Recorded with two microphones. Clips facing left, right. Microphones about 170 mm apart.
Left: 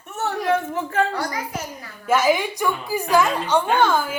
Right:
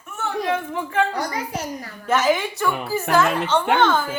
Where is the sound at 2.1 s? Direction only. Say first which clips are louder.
Left 1 dB; 10° left (ahead or behind).